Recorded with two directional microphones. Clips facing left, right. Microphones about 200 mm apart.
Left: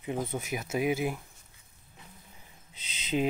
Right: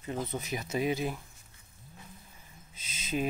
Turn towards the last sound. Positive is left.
turn(degrees=15)  # may be behind; listen again after turning